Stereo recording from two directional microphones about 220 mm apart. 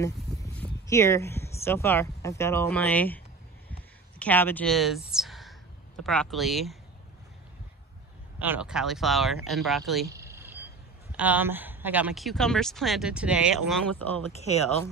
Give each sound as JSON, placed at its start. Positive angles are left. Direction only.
{"t": 0.3, "sound": "a sound", "side_deg": 0}
{"t": 0.8, "sound": "speech", "side_deg": 15}
{"t": 4.2, "sound": "a woman's voice", "side_deg": 10}
{"t": 8.4, "sound": "speech", "side_deg": -5}
{"t": 10.0, "sound": "a sound", "side_deg": -15}
{"t": 11.1, "sound": "speech", "side_deg": -5}
{"t": 14.3, "sound": "speech", "side_deg": 30}